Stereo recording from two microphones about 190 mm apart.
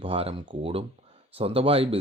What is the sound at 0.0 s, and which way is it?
Speech, 30° right (ahead or behind).